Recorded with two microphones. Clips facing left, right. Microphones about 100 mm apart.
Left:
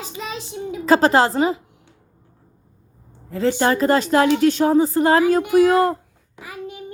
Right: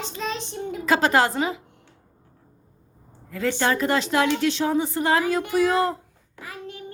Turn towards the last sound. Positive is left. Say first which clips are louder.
# left 4 dB
turn(degrees=15)  # may be behind; listen again after turning